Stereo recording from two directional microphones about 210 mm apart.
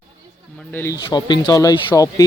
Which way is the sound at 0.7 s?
10° left (ahead or behind).